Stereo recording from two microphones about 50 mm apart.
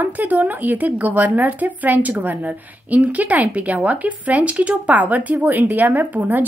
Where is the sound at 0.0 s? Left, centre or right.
Right.